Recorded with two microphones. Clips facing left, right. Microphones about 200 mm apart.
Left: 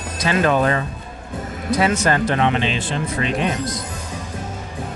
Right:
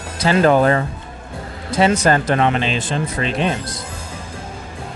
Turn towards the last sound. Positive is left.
turn(degrees=-30)  # may be behind; listen again after turning